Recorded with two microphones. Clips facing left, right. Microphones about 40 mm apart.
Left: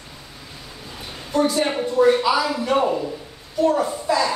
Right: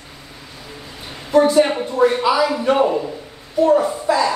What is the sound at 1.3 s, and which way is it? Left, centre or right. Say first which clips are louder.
Speech: right 7 dB; right.